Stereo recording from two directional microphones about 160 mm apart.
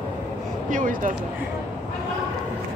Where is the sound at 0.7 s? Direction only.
55° right (ahead or behind).